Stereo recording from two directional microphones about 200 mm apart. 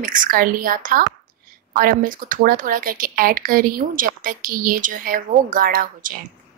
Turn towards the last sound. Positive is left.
turn(degrees=-45)  # may be behind; listen again after turning